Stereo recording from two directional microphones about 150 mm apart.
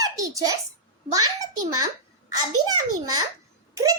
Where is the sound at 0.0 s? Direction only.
25° right (ahead or behind).